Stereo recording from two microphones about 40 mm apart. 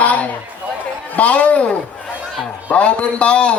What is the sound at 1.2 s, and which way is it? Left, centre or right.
Speech, left.